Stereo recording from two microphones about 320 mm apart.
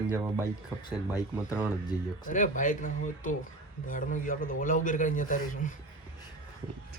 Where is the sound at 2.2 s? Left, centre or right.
Left.